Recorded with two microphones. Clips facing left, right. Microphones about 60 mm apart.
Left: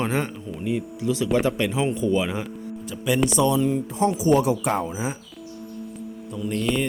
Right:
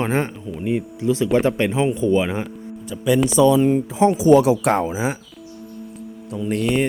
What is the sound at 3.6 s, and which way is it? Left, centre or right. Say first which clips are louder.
Speech: right 5 dB; right.